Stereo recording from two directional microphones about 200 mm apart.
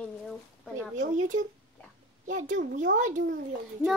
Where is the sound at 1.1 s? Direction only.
40° right (ahead or behind).